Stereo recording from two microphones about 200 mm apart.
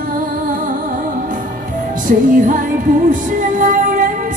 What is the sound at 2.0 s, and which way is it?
Music, 40° right (ahead or behind).